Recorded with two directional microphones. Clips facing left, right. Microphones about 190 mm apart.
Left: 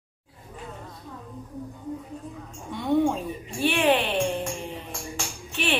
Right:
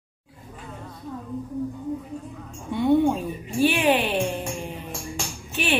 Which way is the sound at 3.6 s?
5° right (ahead or behind).